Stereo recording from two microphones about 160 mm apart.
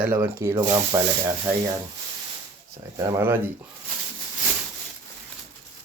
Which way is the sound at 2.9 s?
15° right (ahead or behind).